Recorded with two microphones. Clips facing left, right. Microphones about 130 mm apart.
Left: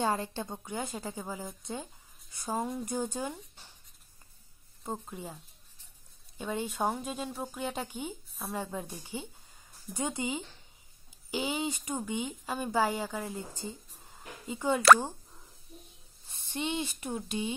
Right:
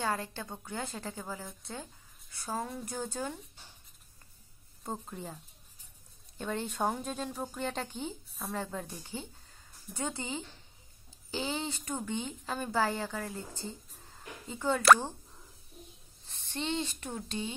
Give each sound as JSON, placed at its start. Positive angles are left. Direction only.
{"t": 0.0, "sound": "a woman's voice", "side_deg": 20}
{"t": 4.8, "sound": "a woman's voice", "side_deg": 5}
{"t": 16.3, "sound": "speech", "side_deg": 10}